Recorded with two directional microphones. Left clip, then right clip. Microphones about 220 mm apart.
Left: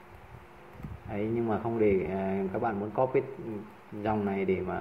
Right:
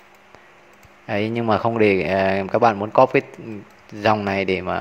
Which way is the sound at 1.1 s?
50° right (ahead or behind).